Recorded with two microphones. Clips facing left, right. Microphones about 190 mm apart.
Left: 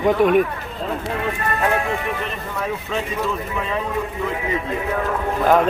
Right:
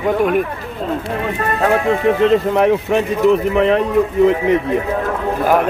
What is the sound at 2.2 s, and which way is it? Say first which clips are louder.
Speech: right 14 dB; 85° right.